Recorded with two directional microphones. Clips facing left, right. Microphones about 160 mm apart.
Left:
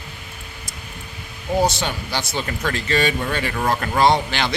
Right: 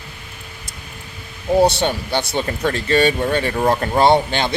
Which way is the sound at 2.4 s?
30° right (ahead or behind).